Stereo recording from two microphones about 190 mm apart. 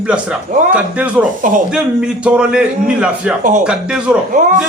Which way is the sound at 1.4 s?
45° right (ahead or behind).